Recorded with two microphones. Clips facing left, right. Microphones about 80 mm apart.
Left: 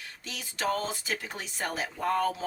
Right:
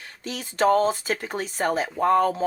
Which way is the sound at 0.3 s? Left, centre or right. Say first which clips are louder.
Right 10 dB; right.